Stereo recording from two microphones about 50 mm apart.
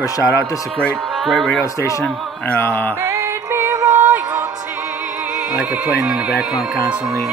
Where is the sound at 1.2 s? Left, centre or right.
Centre.